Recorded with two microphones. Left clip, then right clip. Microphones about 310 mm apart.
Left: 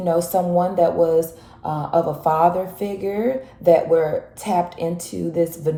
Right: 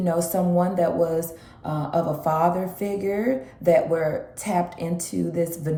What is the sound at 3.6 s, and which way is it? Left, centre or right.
Speech, centre.